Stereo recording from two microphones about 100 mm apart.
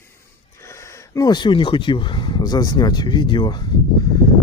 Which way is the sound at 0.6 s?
30° left (ahead or behind).